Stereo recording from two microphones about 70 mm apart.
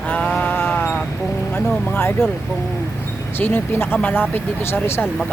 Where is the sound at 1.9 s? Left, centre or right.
Left.